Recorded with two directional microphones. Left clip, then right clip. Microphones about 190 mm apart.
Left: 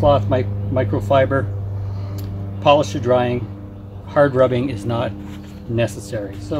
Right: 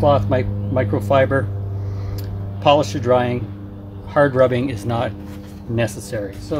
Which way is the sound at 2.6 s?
20° right (ahead or behind).